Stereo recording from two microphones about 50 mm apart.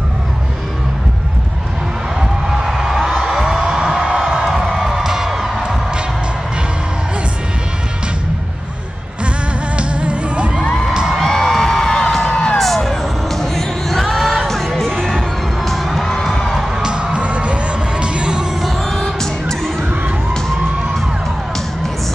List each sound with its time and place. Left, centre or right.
2.1 s a sound: centre
3.2 s music: centre
9.8 s music: right
10.6 s music: centre
10.9 s music: centre
11.1 s music: centre
16.8 s music: right
18.6 s music: centre